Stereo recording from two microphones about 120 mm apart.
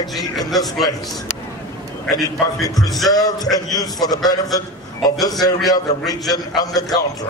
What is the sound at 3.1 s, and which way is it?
A man's voice, 30° left (ahead or behind).